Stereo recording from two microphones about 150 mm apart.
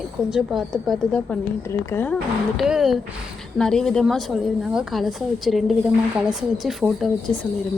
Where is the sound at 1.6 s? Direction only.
15° left (ahead or behind).